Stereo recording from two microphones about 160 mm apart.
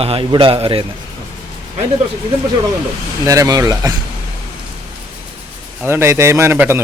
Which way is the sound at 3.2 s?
20° right (ahead or behind).